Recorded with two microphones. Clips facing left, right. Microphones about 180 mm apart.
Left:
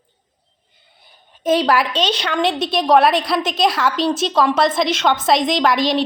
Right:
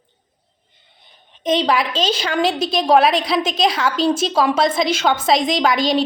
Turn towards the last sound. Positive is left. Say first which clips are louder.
# even
turn(degrees=0)  # may be behind; listen again after turning